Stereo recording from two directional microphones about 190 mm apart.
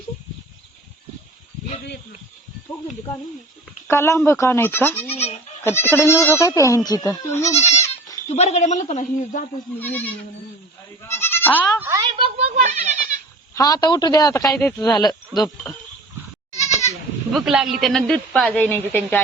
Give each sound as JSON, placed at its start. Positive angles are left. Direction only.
{"t": 3.8, "sound": "speech", "side_deg": 15}
{"t": 5.1, "sound": "goat", "side_deg": 35}
{"t": 5.6, "sound": "speech", "side_deg": 10}
{"t": 8.3, "sound": "speech", "side_deg": 35}
{"t": 9.7, "sound": "speech", "side_deg": 10}
{"t": 11.1, "sound": "goat", "side_deg": 10}
{"t": 11.8, "sound": "a sound", "side_deg": -15}
{"t": 12.2, "sound": "goat", "side_deg": -35}
{"t": 13.5, "sound": "a woman's voice", "side_deg": 20}
{"t": 16.6, "sound": "goat", "side_deg": 35}
{"t": 17.3, "sound": "a woman's voice", "side_deg": -5}